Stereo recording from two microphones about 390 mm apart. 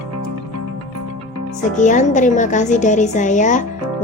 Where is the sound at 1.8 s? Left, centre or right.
Centre.